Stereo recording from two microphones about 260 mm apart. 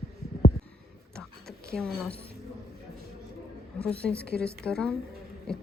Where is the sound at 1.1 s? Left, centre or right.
Centre.